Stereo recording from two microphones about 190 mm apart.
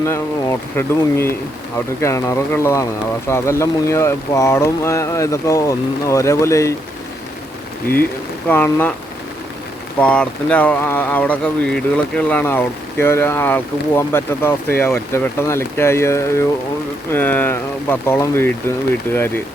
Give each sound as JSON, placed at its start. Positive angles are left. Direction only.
{"t": 0.0, "sound": "speech", "side_deg": 15}
{"t": 8.4, "sound": "speech", "side_deg": 10}
{"t": 10.0, "sound": "speech", "side_deg": 5}